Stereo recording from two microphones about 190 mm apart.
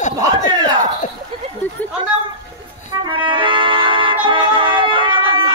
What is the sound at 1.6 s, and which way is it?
Chatter, 10° left (ahead or behind).